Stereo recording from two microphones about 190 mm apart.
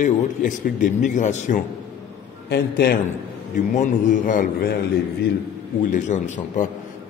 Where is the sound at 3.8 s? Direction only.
45° left (ahead or behind).